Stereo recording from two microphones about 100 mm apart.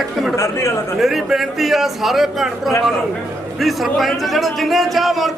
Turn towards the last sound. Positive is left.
turn(degrees=0)  # may be behind; listen again after turning